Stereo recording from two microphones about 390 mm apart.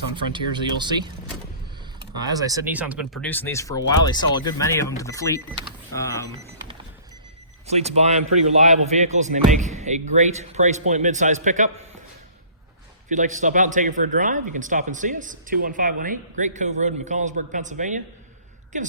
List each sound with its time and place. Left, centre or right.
0.2 s speech: centre
7.7 s speech: centre
13.1 s speech: centre